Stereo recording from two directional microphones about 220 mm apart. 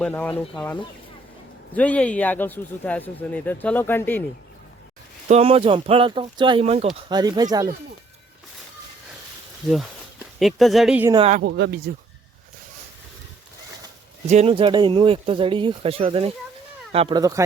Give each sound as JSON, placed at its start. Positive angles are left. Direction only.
{"t": 0.0, "sound": "speech", "side_deg": 10}
{"t": 5.3, "sound": "speech", "side_deg": -25}
{"t": 9.6, "sound": "speech", "side_deg": 0}
{"t": 11.1, "sound": "speech", "side_deg": -25}
{"t": 11.4, "sound": "speech", "side_deg": -55}
{"t": 14.3, "sound": "speech", "side_deg": -30}